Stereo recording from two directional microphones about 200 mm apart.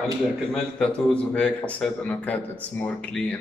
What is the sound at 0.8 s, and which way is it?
A man's voice, 5° left (ahead or behind).